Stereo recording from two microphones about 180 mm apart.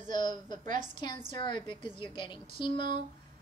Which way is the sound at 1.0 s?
25° left (ahead or behind).